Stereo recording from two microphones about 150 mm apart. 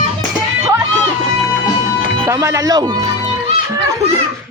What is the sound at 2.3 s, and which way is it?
Speech, 20° right (ahead or behind).